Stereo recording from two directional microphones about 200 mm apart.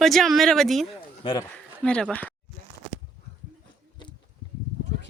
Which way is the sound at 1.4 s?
5° left (ahead or behind).